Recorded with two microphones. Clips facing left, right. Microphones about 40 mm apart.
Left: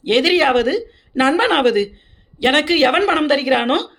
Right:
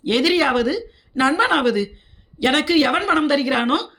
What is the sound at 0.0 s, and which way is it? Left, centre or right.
Speech, left.